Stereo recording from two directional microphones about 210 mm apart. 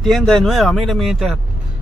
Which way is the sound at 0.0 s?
Centre (ahead or behind).